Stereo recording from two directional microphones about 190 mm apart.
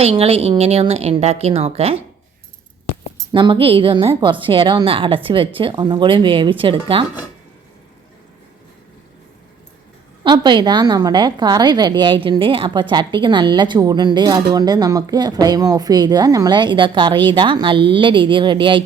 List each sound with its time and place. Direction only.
0.0 s a woman's voice: 30° right (ahead or behind)
3.3 s a woman's voice: 25° right (ahead or behind)
10.2 s a woman's voice: 25° right (ahead or behind)